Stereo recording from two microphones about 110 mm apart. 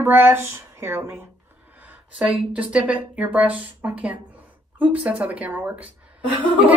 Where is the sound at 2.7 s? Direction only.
10° right (ahead or behind).